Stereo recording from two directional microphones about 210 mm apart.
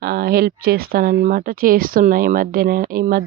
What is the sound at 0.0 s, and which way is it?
Speech, 50° right (ahead or behind).